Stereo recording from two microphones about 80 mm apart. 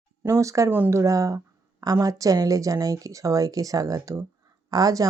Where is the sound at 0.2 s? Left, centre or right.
Right.